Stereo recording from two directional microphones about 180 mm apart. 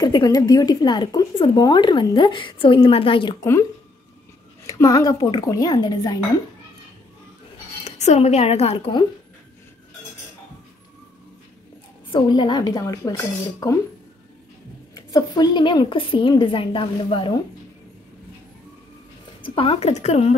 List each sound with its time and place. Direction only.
0.0 s speech: 20° left (ahead or behind)
4.6 s speech: 20° left (ahead or behind)
7.8 s a woman's voice: 35° left (ahead or behind)
12.1 s speech: 25° left (ahead or behind)
15.0 s speech: 25° left (ahead or behind)
19.4 s speech: 30° left (ahead or behind)